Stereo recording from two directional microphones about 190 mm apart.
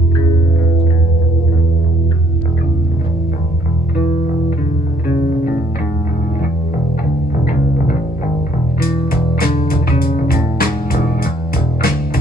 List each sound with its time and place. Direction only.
9.7 s music: 50° left (ahead or behind)